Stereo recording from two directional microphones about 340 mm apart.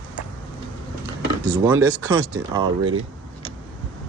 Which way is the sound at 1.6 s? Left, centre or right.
Centre.